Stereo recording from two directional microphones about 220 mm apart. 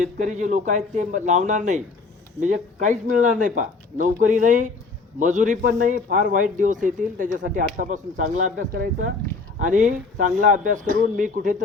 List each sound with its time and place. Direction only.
0.0 s speech: 35° right (ahead or behind)